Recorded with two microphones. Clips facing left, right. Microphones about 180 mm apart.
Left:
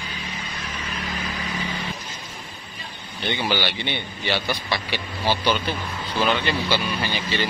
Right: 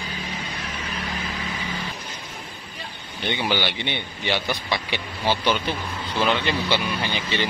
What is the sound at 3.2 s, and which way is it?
Speech, 15° right (ahead or behind).